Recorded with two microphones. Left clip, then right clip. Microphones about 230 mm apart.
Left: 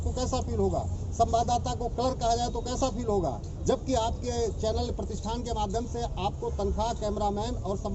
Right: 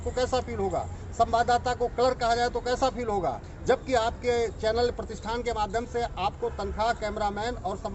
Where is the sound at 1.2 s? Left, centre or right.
Centre.